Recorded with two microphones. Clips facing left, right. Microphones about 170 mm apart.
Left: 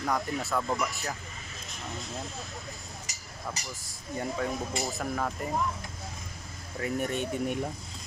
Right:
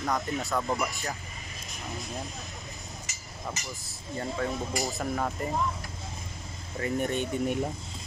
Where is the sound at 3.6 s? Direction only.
35° left (ahead or behind).